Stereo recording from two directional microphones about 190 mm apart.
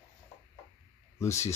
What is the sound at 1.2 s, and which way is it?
Speech, 15° left (ahead or behind).